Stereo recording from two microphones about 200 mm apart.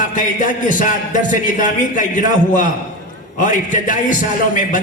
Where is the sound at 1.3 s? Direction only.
40° left (ahead or behind).